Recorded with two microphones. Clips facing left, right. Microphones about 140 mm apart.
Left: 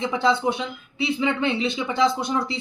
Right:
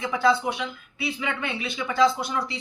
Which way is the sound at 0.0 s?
25° left (ahead or behind).